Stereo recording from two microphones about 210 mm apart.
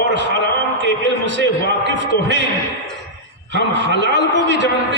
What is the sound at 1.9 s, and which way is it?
Speech, 60° right (ahead or behind).